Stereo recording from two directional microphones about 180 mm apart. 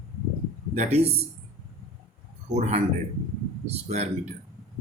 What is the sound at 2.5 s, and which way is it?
Speech, 40° right (ahead or behind).